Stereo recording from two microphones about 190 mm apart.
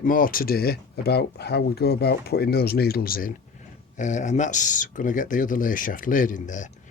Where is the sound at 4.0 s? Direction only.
40° left (ahead or behind).